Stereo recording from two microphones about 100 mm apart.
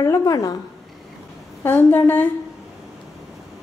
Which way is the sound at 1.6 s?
20° left (ahead or behind).